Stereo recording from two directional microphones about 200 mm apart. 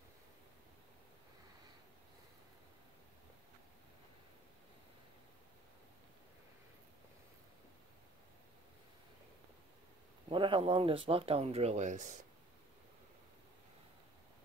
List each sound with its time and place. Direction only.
10.3 s speech: 25° right (ahead or behind)